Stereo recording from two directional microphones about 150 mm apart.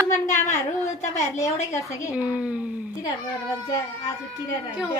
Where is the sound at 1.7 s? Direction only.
20° left (ahead or behind).